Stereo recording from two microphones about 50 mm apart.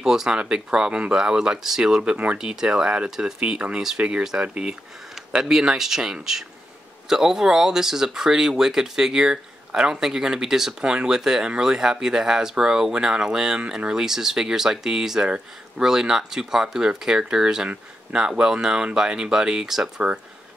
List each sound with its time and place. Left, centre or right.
0.0 s speech: centre